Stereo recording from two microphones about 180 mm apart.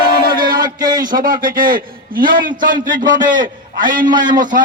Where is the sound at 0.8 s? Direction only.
20° right (ahead or behind).